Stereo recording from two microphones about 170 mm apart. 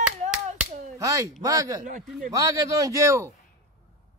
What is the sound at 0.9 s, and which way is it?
A man's voice, 20° right (ahead or behind).